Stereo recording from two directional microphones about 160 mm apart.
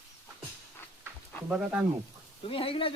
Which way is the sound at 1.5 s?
10° right (ahead or behind).